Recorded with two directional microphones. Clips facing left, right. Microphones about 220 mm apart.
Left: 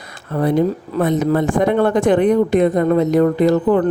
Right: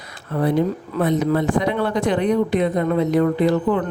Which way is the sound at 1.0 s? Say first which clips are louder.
Left 3 dB; 45° left (ahead or behind).